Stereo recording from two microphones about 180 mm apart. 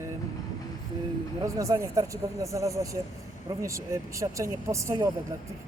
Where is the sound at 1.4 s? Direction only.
15° right (ahead or behind).